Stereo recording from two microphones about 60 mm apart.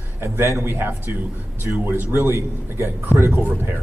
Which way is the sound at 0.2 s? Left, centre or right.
Right.